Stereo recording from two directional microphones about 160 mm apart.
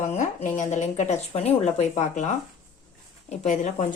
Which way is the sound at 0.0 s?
45° left (ahead or behind).